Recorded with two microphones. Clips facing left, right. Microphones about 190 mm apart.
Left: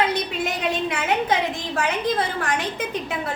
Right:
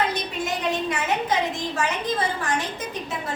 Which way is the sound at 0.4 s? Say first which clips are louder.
Right 2 dB; 60° left (ahead or behind).